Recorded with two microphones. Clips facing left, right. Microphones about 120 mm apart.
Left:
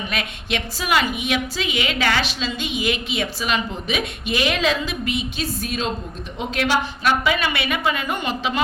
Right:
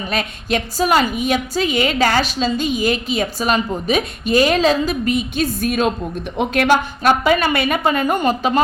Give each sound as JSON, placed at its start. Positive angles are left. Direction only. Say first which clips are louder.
{"t": 0.1, "sound": "a woman's voice", "louder": "right 9 dB", "side_deg": -40}